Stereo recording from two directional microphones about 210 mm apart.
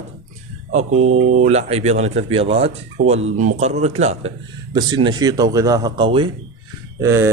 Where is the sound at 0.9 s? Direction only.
90° right.